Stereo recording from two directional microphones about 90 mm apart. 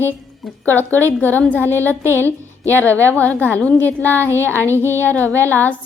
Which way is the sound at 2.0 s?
30° right (ahead or behind).